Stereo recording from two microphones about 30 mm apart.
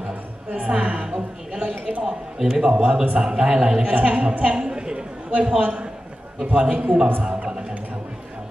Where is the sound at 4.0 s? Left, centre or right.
Right.